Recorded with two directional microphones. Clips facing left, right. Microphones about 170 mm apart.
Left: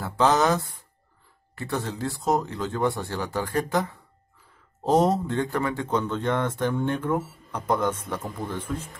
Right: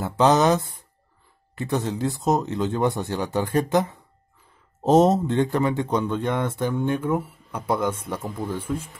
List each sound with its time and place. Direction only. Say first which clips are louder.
0.0 s speech: right 3 dB; 20° right (ahead or behind)